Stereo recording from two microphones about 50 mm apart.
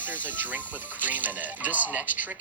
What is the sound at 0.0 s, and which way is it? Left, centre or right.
Speech, right.